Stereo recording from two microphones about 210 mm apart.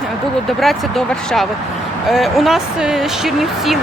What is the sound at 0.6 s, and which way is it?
Speech, centre (ahead or behind).